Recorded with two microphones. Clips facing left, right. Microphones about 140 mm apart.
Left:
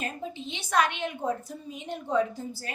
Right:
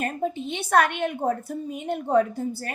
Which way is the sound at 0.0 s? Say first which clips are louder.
Right 8 dB; 55° right (ahead or behind).